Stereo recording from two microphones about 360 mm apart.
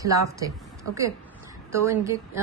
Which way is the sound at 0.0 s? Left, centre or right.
Centre.